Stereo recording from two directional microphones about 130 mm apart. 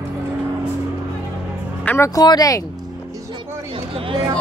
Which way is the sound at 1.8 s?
20° left (ahead or behind).